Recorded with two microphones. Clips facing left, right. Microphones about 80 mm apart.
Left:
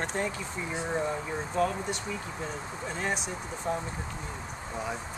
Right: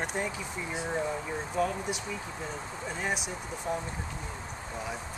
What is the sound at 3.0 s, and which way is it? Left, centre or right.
Speech, centre.